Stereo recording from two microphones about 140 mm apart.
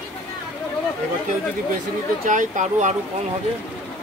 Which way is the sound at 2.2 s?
65° right (ahead or behind).